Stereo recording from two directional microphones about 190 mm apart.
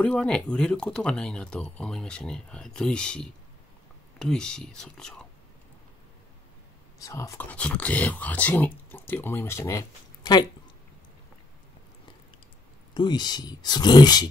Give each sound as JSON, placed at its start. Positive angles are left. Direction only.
{"t": 0.0, "sound": "speech", "side_deg": 5}
{"t": 7.0, "sound": "speech", "side_deg": 15}
{"t": 12.9, "sound": "speech", "side_deg": 25}